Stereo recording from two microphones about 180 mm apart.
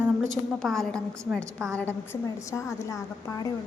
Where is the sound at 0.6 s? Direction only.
Centre (ahead or behind).